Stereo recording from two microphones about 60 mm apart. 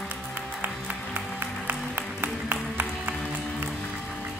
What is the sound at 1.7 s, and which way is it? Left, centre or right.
Music, right.